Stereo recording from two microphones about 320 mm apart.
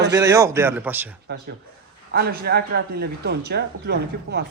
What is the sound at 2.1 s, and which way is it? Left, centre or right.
Speech, right.